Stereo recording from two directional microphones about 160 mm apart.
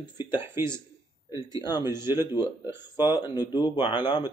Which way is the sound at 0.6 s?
15° right (ahead or behind).